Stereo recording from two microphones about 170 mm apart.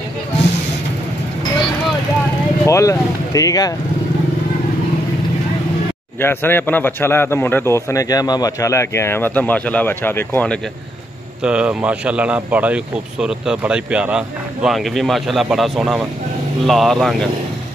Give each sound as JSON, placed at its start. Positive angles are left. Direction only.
{"t": 2.6, "sound": "speech", "side_deg": 20}
{"t": 6.2, "sound": "a man's voice", "side_deg": 10}
{"t": 11.4, "sound": "speech", "side_deg": -5}